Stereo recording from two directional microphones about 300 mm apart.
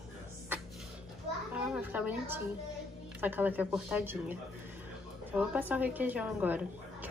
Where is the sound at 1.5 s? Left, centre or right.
Centre.